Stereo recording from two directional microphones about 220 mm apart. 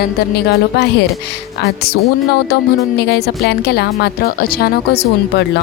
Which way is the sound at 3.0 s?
50° left (ahead or behind).